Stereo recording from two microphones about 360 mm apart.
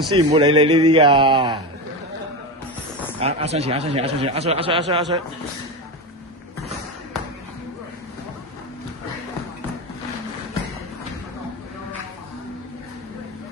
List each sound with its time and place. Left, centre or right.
0.1 s speech: centre
3.2 s speech: centre